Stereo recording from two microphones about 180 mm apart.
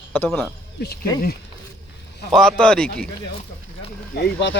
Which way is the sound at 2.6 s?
5° left (ahead or behind).